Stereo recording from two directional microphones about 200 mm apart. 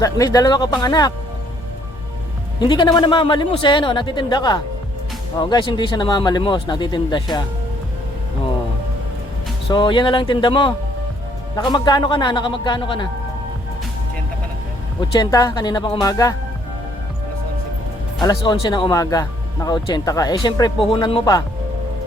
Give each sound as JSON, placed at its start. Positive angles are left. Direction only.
{"t": 0.0, "sound": "speech", "side_deg": 15}
{"t": 2.6, "sound": "speech", "side_deg": 20}
{"t": 9.6, "sound": "speech", "side_deg": 25}
{"t": 15.1, "sound": "speech", "side_deg": 20}
{"t": 18.2, "sound": "speech", "side_deg": 20}